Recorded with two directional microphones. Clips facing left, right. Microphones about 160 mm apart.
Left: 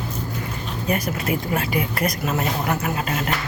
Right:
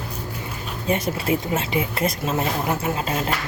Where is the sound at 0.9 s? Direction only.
25° right (ahead or behind).